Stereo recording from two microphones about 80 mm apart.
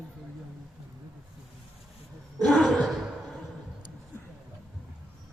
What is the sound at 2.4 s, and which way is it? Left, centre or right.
Gasp, centre.